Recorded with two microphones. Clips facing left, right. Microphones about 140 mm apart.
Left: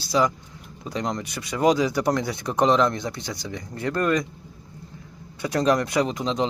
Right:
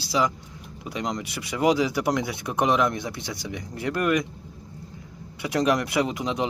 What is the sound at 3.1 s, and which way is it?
Speech, 25° right (ahead or behind).